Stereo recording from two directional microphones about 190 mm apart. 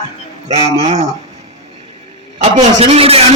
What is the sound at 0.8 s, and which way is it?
Speech, 35° right (ahead or behind).